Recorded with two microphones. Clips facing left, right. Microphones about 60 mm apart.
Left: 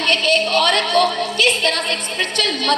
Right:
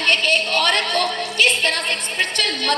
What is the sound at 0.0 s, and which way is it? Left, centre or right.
A woman's voice, right.